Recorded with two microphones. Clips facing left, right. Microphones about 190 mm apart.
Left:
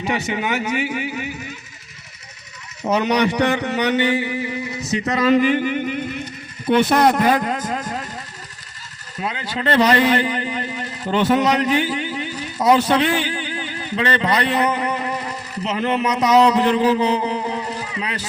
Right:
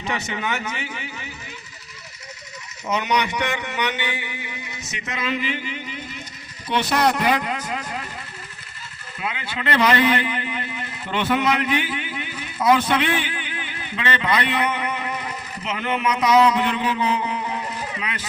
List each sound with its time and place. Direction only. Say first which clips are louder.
0.3 s a man's voice: left 6 dB; 15° left (ahead or behind)
0.9 s a sound: left 10 dB; 15° left (ahead or behind)
2.9 s a man's voice: left 5 dB; 35° left (ahead or behind)
9.1 s a man's voice: left 4 dB; 35° left (ahead or behind)